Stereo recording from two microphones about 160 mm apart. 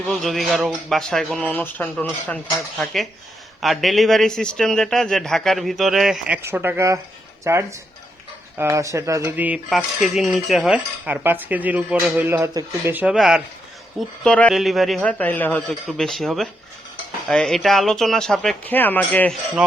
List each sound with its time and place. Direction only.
0.1 s speech: centre (ahead or behind)
14.3 s a man's voice: 5° left (ahead or behind)
19.6 s speech: 5° right (ahead or behind)